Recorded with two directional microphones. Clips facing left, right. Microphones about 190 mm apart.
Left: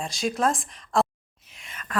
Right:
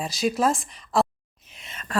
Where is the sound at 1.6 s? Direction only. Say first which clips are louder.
Right 3 dB; 25° right (ahead or behind).